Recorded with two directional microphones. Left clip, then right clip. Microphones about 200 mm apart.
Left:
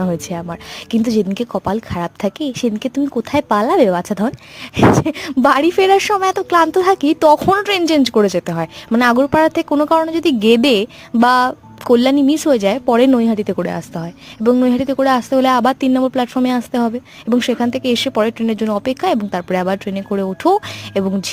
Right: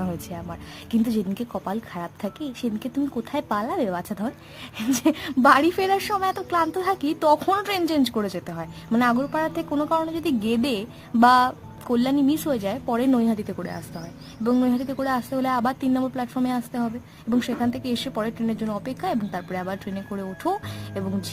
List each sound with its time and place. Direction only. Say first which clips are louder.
0.0 s speech: left 11 dB; 35° left (ahead or behind)
9.6 s a woman's voice: left 10 dB; 30° left (ahead or behind)
9.9 s speech: left 9 dB; 40° left (ahead or behind)